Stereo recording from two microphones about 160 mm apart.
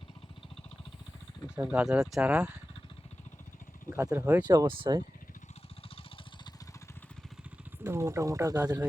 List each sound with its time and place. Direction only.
1.5 s speech: 10° right (ahead or behind)
3.8 s speech: 15° right (ahead or behind)
4.4 s speech: 25° right (ahead or behind)
7.9 s speech: 15° right (ahead or behind)